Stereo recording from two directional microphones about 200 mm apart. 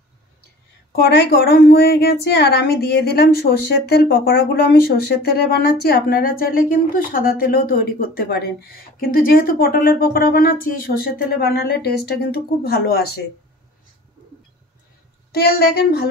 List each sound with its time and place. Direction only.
1.0 s a woman's voice: 55° left (ahead or behind)
15.3 s a woman's voice: 50° left (ahead or behind)